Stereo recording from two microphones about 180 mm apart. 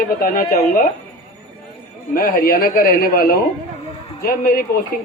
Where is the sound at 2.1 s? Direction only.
55° left (ahead or behind).